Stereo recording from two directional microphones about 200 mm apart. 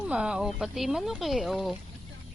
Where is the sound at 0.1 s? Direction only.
5° right (ahead or behind).